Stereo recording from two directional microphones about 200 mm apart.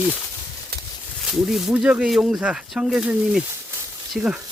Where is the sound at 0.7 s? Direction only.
50° right (ahead or behind).